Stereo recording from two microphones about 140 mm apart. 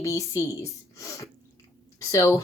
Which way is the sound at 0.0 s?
20° left (ahead or behind).